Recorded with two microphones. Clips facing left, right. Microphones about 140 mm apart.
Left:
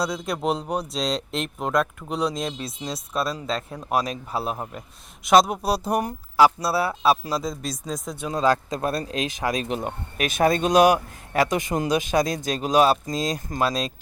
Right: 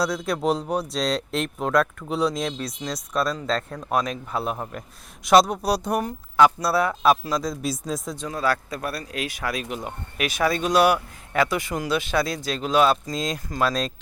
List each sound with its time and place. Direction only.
0.0 s speech: centre (ahead or behind)
2.6 s speech: 25° left (ahead or behind)
3.1 s speech: 5° left (ahead or behind)
4.3 s speech: 30° left (ahead or behind)
4.5 s speech: 10° left (ahead or behind)
6.3 s speech: 30° left (ahead or behind)
7.3 s speech: centre (ahead or behind)
8.3 s speech: 20° left (ahead or behind)
9.7 s speech: 40° left (ahead or behind)
10.6 s speech: 20° left (ahead or behind)
12.2 s speech: 45° left (ahead or behind)
13.5 s speech: 25° left (ahead or behind)